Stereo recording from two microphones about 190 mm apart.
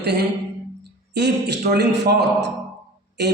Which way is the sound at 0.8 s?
60° right (ahead or behind).